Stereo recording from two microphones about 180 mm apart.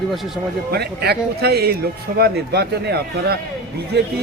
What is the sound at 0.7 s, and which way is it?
A man's voice, 60° right (ahead or behind).